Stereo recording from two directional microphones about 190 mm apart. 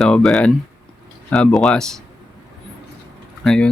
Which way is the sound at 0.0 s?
Centre (ahead or behind).